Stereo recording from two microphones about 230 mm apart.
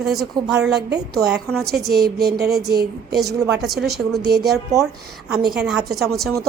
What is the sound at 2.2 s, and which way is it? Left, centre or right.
A woman's voice, right.